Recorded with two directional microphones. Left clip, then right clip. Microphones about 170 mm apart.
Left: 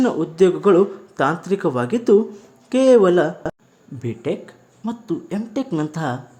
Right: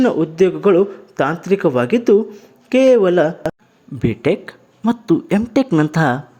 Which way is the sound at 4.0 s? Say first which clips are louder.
Right 8 dB; 35° right (ahead or behind).